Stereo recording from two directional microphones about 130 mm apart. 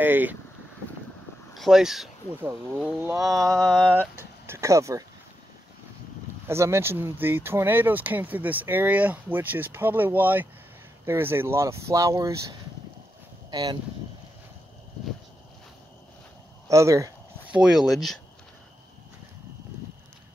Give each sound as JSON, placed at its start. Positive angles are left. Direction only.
{"t": 0.0, "sound": "speech", "side_deg": -15}
{"t": 1.5, "sound": "speech", "side_deg": 0}
{"t": 2.3, "sound": "speech", "side_deg": -15}
{"t": 3.2, "sound": "speech", "side_deg": -25}
{"t": 3.6, "sound": "speech", "side_deg": -5}
{"t": 4.5, "sound": "speech", "side_deg": -25}
{"t": 6.4, "sound": "speech", "side_deg": -20}
{"t": 13.5, "sound": "speech", "side_deg": -30}
{"t": 16.6, "sound": "speech", "side_deg": -25}
{"t": 17.5, "sound": "speech", "side_deg": -5}